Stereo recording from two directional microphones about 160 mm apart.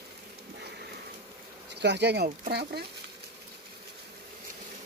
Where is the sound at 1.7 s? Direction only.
90° right.